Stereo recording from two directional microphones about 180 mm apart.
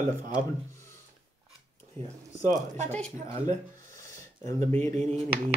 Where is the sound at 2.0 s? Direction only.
35° right (ahead or behind).